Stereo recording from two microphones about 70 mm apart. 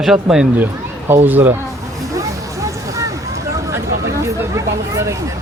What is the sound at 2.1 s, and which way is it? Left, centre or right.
Vehicle, right.